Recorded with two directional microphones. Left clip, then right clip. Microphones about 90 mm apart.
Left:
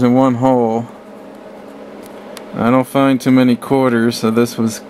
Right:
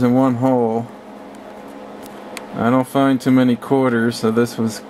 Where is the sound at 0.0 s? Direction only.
15° left (ahead or behind).